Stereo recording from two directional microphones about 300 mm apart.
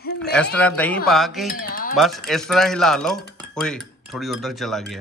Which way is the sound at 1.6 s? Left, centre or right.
Left.